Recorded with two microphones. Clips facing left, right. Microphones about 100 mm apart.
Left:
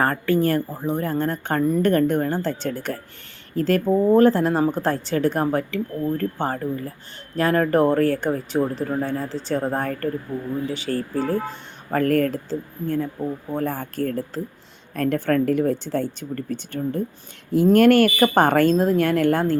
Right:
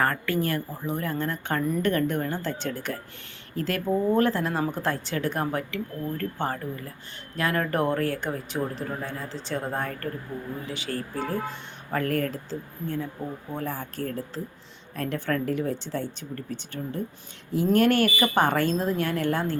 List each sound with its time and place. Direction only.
0.0 s speech: 30° left (ahead or behind)
11.9 s speech: 50° left (ahead or behind)